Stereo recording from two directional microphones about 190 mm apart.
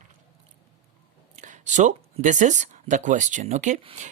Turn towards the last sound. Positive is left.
turn(degrees=-35)  # may be behind; listen again after turning